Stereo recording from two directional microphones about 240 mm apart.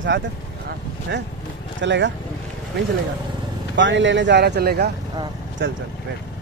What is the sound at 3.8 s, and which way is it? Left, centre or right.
Speech, right.